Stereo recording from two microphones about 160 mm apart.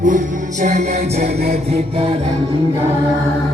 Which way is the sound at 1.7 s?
35° right (ahead or behind).